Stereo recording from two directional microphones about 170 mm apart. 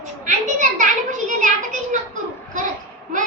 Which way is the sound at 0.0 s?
45° right (ahead or behind).